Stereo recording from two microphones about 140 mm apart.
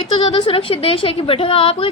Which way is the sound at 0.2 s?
35° left (ahead or behind).